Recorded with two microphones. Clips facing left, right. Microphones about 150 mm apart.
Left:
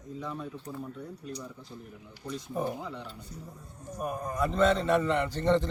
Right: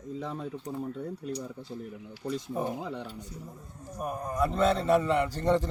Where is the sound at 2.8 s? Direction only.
55° right (ahead or behind).